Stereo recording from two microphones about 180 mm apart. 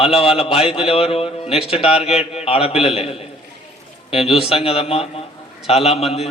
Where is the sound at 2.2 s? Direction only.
35° left (ahead or behind).